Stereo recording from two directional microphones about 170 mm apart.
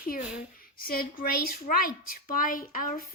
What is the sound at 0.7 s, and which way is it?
Speech, 60° left (ahead or behind).